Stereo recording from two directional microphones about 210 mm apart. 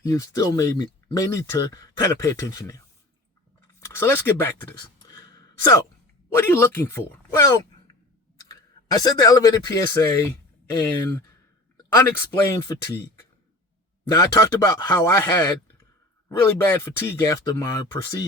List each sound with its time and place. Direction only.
0.0 s speech: 15° left (ahead or behind)
8.9 s speech: 15° left (ahead or behind)
11.8 s speech: 15° left (ahead or behind)
14.2 s speech: 15° left (ahead or behind)